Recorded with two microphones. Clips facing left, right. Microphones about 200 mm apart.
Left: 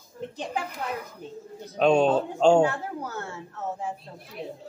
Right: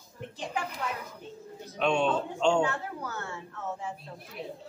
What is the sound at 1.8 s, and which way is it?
Speech, 40° left (ahead or behind).